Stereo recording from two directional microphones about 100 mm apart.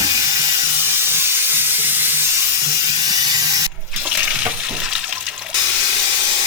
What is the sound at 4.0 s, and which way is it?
Water, 15° right (ahead or behind).